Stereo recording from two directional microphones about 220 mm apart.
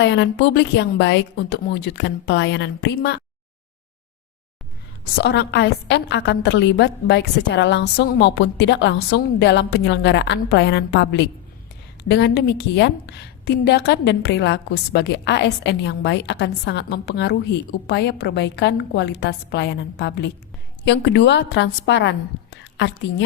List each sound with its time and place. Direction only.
0.0 s a woman's voice: 55° left (ahead or behind)
5.1 s a woman's voice: 50° left (ahead or behind)